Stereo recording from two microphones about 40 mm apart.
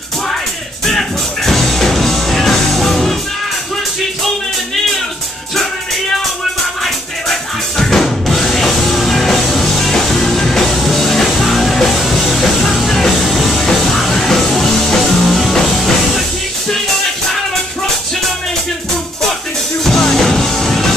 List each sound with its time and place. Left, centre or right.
0.8 s music: centre
6.8 s drum: centre
11.9 s music: centre
19.8 s music: centre